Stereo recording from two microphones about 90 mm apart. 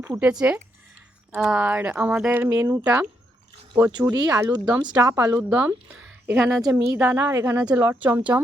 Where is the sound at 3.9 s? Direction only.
50° right (ahead or behind).